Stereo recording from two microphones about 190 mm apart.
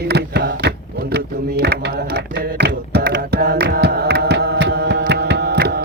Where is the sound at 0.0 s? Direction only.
60° right (ahead or behind).